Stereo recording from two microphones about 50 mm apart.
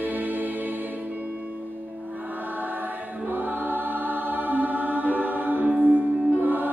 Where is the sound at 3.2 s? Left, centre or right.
Right.